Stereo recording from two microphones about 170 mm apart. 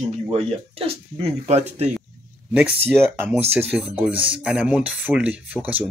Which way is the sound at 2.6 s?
10° right (ahead or behind).